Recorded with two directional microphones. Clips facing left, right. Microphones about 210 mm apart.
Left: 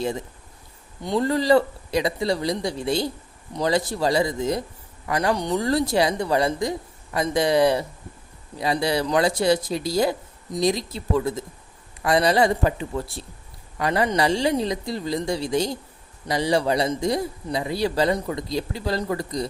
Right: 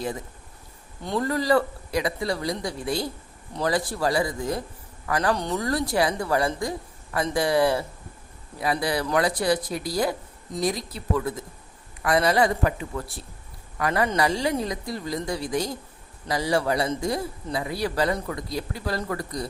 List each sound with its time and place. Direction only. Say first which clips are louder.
1.2 s a man's voice: left 4 dB; 25° left (ahead or behind)
5.5 s a man's voice: left 3 dB; 25° left (ahead or behind)